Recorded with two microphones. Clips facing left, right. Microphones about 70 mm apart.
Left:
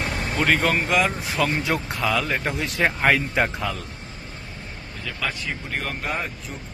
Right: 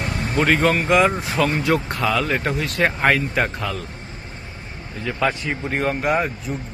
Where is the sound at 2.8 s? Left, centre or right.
Centre.